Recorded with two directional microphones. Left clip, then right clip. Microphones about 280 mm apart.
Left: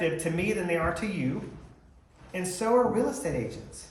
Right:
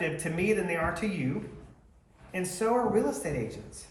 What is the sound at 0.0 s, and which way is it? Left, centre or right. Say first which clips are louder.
Speech: left 2 dB; centre.